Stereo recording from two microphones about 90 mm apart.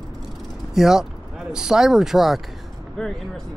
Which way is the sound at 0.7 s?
5° right (ahead or behind).